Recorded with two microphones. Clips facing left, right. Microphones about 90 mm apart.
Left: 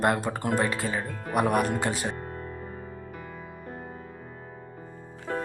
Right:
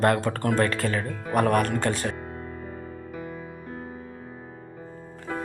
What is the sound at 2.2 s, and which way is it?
Music, 15° right (ahead or behind).